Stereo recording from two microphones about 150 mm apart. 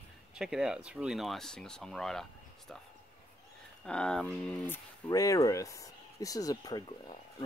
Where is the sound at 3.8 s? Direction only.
5° left (ahead or behind).